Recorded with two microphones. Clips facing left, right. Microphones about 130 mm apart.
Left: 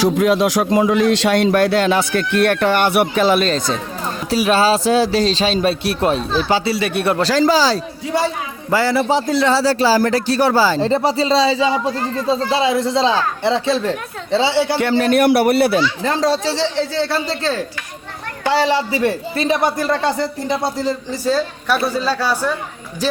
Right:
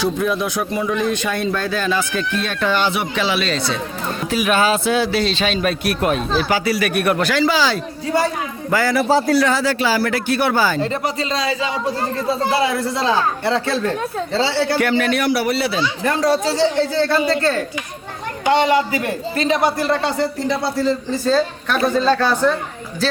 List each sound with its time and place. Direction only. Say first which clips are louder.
0.0 s a man's voice: left 5 dB; 90° left; by 3.1 s 60° left (ahead or behind)
3.2 s a man's voice: left 5 dB; 45° left (ahead or behind)
8.7 s a man's voice: even; 25° left (ahead or behind)
15.1 s a man's voice: left 5 dB; 55° left (ahead or behind)
16.0 s speech: even; 25° left (ahead or behind)
18.6 s a man's voice: even; 30° left (ahead or behind)
20.5 s speech: left 1 dB; 50° left (ahead or behind)
20.7 s a man's voice: right 2 dB; 15° left (ahead or behind)